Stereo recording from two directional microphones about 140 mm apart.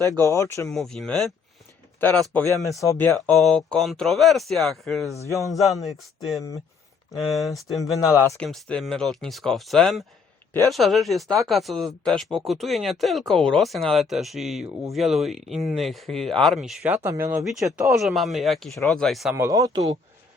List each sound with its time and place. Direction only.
0.3 s speech: 20° left (ahead or behind)
0.7 s speech: centre (ahead or behind)
2.6 s speech: 20° left (ahead or behind)
3.2 s speech: 5° left (ahead or behind)
7.9 s speech: 25° left (ahead or behind)
8.4 s speech: 5° left (ahead or behind)
17.9 s speech: centre (ahead or behind)
19.5 s speech: 25° right (ahead or behind)